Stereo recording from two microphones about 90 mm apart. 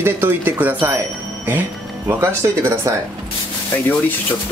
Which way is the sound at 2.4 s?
40° right (ahead or behind).